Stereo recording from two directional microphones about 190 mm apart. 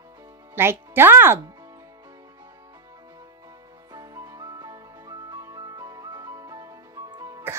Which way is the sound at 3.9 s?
20° right (ahead or behind).